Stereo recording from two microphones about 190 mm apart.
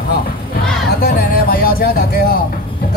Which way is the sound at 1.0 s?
50° left (ahead or behind).